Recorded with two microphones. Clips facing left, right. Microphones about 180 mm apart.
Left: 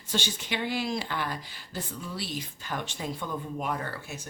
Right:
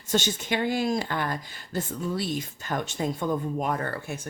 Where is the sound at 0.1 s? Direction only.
45° right (ahead or behind).